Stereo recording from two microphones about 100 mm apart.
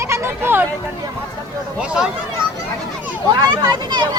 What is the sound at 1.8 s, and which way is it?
Speech, 5° right (ahead or behind).